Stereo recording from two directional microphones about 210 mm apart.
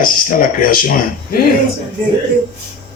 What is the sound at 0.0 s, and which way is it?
Speech, 40° left (ahead or behind).